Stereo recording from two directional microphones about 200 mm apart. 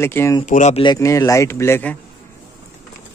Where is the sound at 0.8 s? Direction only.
20° left (ahead or behind).